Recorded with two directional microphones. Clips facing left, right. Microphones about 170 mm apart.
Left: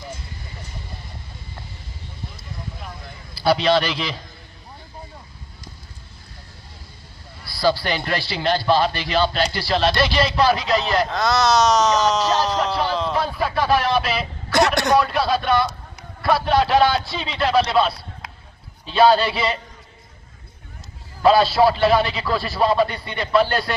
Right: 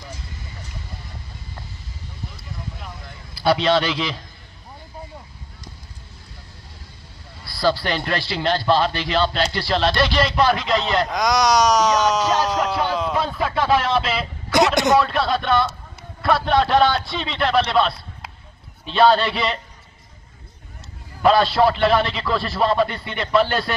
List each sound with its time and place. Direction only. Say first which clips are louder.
3.4 s speech: even; centre (ahead or behind)
7.4 s a man's voice: even; 5° left (ahead or behind)
11.1 s speech: even; 15° right (ahead or behind)
12.4 s music: even; 10° right (ahead or behind)
13.1 s speech: even; centre (ahead or behind)
14.0 s a sound: even; 20° right (ahead or behind)
15.0 s a man's voice: even; centre (ahead or behind)
21.2 s speech: left 1 dB; 5° left (ahead or behind)